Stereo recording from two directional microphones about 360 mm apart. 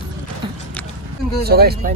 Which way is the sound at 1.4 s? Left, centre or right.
Right.